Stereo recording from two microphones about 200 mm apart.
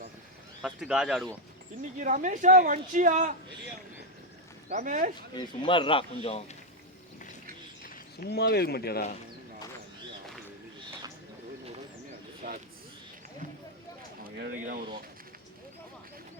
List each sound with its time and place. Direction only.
0.6 s speech: 5° right (ahead or behind)
2.0 s speech: 40° right (ahead or behind)
4.7 s speech: 35° right (ahead or behind)
5.3 s speech: 25° left (ahead or behind)
7.9 s speech: 50° left (ahead or behind)
12.4 s a sound: 45° right (ahead or behind)
14.3 s a sound: 60° right (ahead or behind)
14.5 s speech: 40° right (ahead or behind)